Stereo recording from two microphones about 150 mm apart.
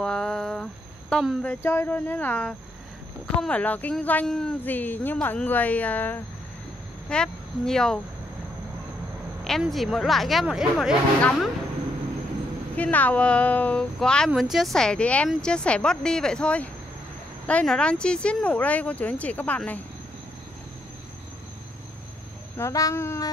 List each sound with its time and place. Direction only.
0.0 s a sound: 5° left (ahead or behind)
1.1 s speech: centre (ahead or behind)
9.4 s speech: centre (ahead or behind)
12.7 s speech: 10° left (ahead or behind)
22.6 s speech: 20° left (ahead or behind)